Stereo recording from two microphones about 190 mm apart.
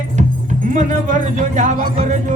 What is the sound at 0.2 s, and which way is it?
Music, 40° right (ahead or behind).